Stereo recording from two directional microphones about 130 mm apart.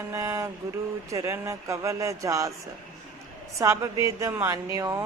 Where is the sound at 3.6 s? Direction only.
25° right (ahead or behind).